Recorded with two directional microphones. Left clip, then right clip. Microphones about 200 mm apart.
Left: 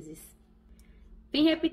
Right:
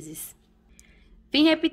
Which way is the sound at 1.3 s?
25° right (ahead or behind).